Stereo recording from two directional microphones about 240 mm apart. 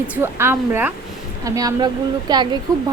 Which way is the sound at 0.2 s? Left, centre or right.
Centre.